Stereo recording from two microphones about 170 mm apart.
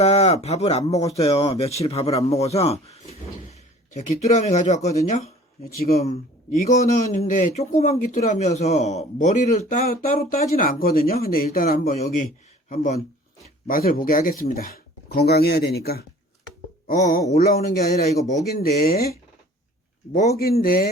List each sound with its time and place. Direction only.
0.0 s a sound: 35° left (ahead or behind)
0.4 s speech: 40° left (ahead or behind)
6.7 s speech: 45° left (ahead or behind)
13.7 s speech: 60° left (ahead or behind)
16.8 s speech: 50° left (ahead or behind)
17.3 s speech: 65° left (ahead or behind)
20.3 s speech: 65° left (ahead or behind)